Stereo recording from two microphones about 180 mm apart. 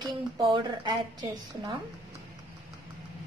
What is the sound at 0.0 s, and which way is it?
A woman's voice, 25° right (ahead or behind).